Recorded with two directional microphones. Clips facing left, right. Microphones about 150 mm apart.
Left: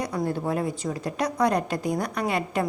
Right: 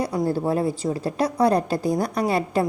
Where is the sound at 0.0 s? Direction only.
30° right (ahead or behind).